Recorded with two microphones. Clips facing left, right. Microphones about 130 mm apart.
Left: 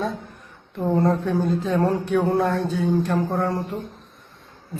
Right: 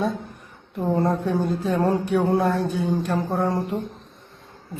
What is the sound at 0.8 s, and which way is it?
A woman's voice, 5° right (ahead or behind).